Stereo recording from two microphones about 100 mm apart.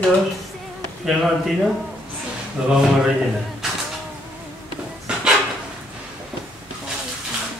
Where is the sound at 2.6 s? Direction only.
10° right (ahead or behind).